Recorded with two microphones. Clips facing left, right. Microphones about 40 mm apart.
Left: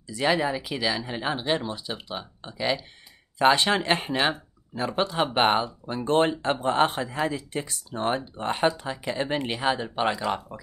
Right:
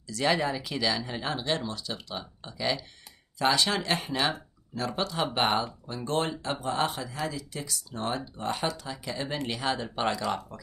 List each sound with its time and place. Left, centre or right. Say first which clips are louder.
0.0 s speech: left 3 dB; centre
3.3 s speech: left 5 dB; left